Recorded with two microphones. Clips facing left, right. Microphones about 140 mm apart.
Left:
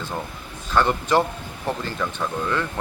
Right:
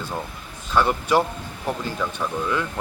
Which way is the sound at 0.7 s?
10° right (ahead or behind).